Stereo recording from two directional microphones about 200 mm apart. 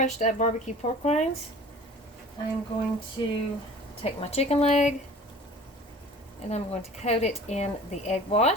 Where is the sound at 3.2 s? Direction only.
20° left (ahead or behind).